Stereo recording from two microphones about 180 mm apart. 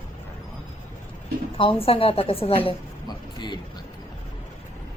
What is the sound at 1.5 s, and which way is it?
A woman's voice, 30° left (ahead or behind).